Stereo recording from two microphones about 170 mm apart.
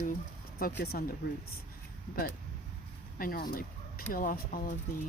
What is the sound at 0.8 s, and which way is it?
Speech, 65° left (ahead or behind).